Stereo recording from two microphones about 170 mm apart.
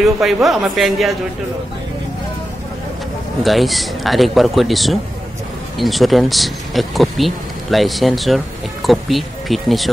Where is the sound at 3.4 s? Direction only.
Centre (ahead or behind).